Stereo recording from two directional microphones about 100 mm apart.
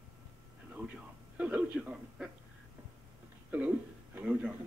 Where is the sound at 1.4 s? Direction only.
15° right (ahead or behind).